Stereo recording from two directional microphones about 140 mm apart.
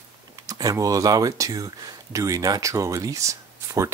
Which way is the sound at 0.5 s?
25° right (ahead or behind).